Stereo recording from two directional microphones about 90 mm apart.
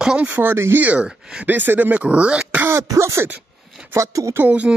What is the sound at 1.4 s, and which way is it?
Speech, 20° right (ahead or behind).